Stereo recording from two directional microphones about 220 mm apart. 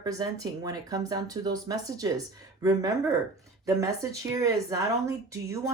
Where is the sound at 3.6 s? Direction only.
15° right (ahead or behind).